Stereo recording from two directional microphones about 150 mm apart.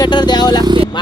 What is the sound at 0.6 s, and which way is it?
Speech, 35° right (ahead or behind).